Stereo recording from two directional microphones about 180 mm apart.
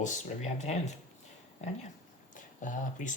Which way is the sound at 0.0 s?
40° left (ahead or behind).